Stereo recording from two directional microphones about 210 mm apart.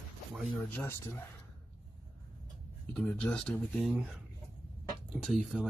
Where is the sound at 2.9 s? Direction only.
5° left (ahead or behind).